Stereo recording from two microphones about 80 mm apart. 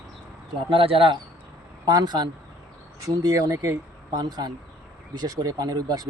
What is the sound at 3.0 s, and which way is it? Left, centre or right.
Speech, right.